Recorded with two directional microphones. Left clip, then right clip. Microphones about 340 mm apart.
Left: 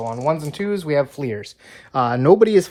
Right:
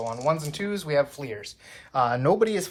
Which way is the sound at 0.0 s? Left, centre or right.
Left.